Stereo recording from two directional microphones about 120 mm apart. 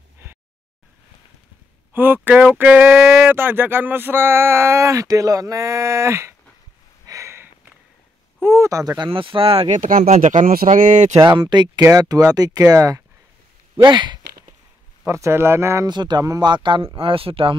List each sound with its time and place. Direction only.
2.0 s speech: 15° right (ahead or behind)
7.1 s a sound: 25° right (ahead or behind)
8.4 s speech: 20° right (ahead or behind); by 9.7 s 50° right (ahead or behind)
9.7 s speech: 85° right
11.1 s speech: 35° right (ahead or behind)
13.8 s speech: 40° right (ahead or behind)
15.0 s speech: 25° right (ahead or behind)
15.9 s speech: 40° right (ahead or behind)